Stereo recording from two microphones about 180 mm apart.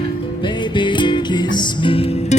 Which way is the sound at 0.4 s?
25° left (ahead or behind).